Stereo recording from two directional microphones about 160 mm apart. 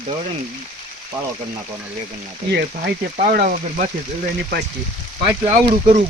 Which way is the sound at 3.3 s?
55° right (ahead or behind).